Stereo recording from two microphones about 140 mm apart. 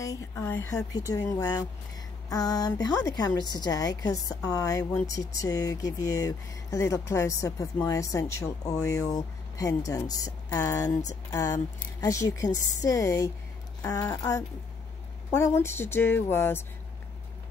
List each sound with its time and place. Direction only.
0.0 s speech: 20° left (ahead or behind)
0.9 s a woman's voice: 25° left (ahead or behind)